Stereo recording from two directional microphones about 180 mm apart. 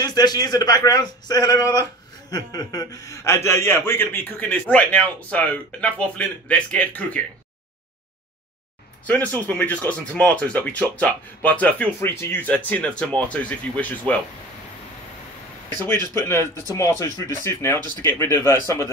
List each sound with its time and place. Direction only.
0.0 s a man's voice: 20° left (ahead or behind)
9.0 s speech: 10° left (ahead or behind)
15.8 s speech: 15° left (ahead or behind)